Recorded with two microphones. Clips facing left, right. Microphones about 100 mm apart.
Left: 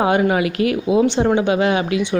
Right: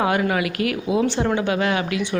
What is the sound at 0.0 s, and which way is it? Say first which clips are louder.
A woman's voice: left 4 dB; 25° left (ahead or behind).